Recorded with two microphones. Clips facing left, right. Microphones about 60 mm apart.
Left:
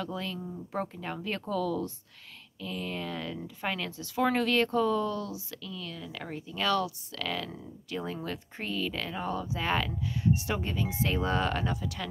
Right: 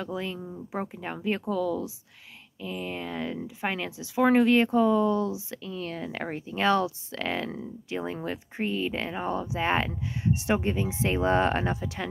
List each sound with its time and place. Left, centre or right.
0.0 s speech: centre